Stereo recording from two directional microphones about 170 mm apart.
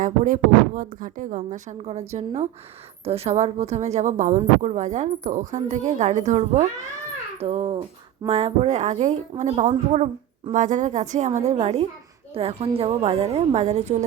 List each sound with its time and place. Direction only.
0.0 s a woman's voice: 50° right (ahead or behind)